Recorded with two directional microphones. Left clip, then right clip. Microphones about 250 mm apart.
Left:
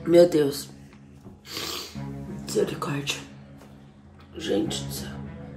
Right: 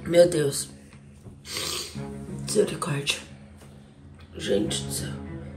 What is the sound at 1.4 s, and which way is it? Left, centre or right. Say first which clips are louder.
Filing: right 2 dB; centre.